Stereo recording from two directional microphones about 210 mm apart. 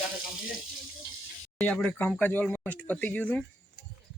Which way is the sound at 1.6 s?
5° left (ahead or behind).